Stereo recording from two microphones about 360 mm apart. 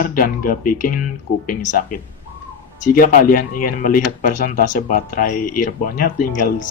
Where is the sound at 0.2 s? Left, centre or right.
Left.